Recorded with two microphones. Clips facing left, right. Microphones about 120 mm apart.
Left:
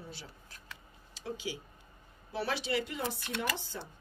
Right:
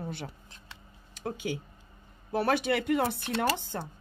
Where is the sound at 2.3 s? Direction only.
50° right (ahead or behind).